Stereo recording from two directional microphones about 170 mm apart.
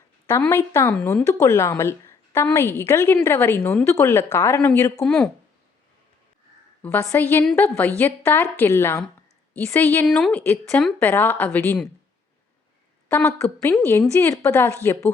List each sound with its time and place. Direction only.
0.4 s a woman's voice: 15° left (ahead or behind)
6.8 s a woman's voice: 10° left (ahead or behind)
13.1 s a woman's voice: 15° left (ahead or behind)